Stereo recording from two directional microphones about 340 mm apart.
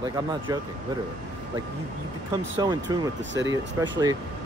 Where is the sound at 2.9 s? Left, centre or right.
Centre.